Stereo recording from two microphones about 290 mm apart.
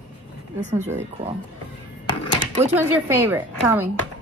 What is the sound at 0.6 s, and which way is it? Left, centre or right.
Speech, right.